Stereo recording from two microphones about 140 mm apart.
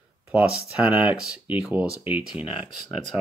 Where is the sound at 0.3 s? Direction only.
10° right (ahead or behind).